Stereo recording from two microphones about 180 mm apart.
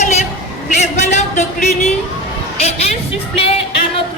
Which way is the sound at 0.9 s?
40° left (ahead or behind).